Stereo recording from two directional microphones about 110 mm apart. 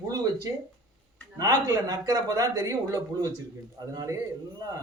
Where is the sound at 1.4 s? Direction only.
35° right (ahead or behind).